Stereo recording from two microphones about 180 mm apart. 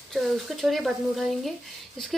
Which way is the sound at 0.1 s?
Centre (ahead or behind).